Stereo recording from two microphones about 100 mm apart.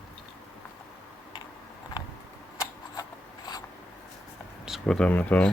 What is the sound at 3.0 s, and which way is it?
Filing, 45° left (ahead or behind).